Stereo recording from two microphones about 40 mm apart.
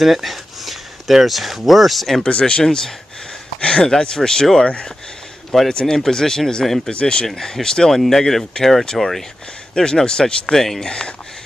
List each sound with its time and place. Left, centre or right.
0.0 s speech: centre
2.2 s speech: left
2.6 s speech: centre
5.7 s speech: centre
6.9 s speech: left
7.2 s speech: centre
9.8 s speech: centre
10.9 s speech: left